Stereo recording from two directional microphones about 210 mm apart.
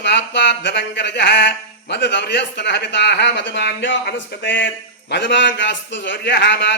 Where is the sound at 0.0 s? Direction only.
55° left (ahead or behind).